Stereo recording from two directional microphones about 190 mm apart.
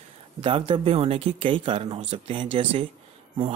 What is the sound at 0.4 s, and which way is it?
A man's voice, 30° right (ahead or behind).